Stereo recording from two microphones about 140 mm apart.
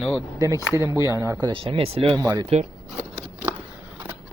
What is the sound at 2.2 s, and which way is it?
Speech, 25° right (ahead or behind).